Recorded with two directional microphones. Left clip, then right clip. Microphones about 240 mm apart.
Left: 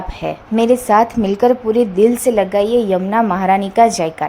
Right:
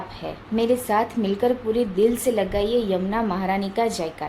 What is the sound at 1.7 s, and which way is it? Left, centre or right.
Speech, left.